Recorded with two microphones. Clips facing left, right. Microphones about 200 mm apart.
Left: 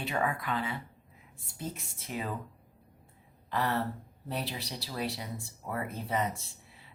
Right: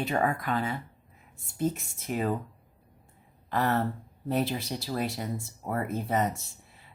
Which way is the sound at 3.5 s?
45° right (ahead or behind).